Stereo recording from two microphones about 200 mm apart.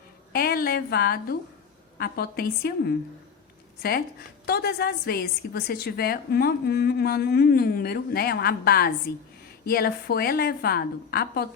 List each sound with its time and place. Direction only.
0.3 s a woman's voice: 50° left (ahead or behind)
4.4 s a woman's voice: 50° left (ahead or behind)